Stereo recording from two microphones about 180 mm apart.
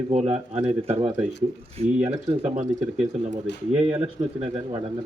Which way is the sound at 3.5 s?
75° left (ahead or behind).